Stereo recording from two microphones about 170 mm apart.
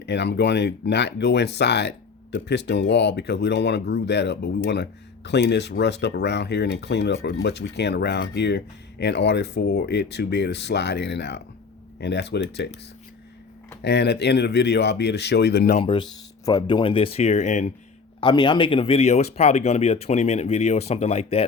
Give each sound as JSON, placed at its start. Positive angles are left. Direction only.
{"t": 0.0, "sound": "speech", "side_deg": 85}
{"t": 13.8, "sound": "speech", "side_deg": 75}
{"t": 15.8, "sound": "speech", "side_deg": 30}
{"t": 18.2, "sound": "speech", "side_deg": 25}